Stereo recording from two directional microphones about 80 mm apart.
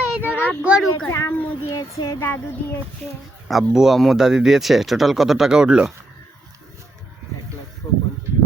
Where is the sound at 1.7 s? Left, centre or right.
Left.